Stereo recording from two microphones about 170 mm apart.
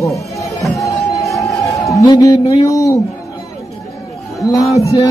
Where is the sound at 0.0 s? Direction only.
20° left (ahead or behind).